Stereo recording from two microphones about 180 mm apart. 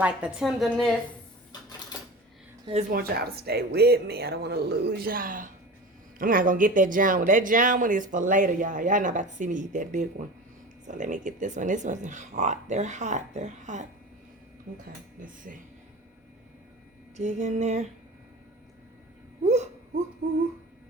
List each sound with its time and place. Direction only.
0.0 s a woman's voice: 5° right (ahead or behind)
2.9 s speech: 55° right (ahead or behind); by 13.8 s 40° right (ahead or behind)
15.5 s speech: 45° right (ahead or behind)
17.2 s music: 40° right (ahead or behind)